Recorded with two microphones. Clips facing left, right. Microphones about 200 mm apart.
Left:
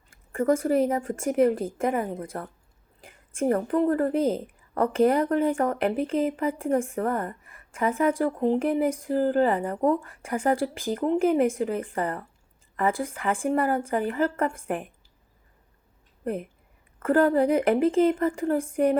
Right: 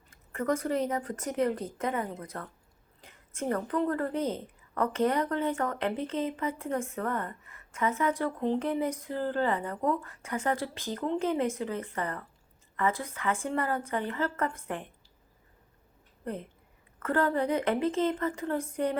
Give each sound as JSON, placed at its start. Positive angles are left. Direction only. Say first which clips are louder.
{"t": 0.1, "sound": "speech", "louder": "left 7 dB", "side_deg": 30}
{"t": 3.5, "sound": "speech", "louder": "left 6 dB", "side_deg": 25}
{"t": 17.0, "sound": "speech", "louder": "left 7 dB", "side_deg": 30}